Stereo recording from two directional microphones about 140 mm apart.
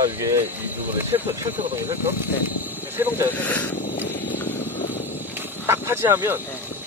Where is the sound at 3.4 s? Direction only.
10° left (ahead or behind).